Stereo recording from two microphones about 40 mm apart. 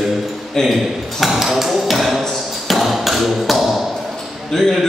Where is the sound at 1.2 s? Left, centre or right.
Centre.